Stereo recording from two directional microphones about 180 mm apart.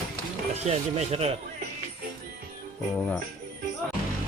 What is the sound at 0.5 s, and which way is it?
Speech, 35° right (ahead or behind).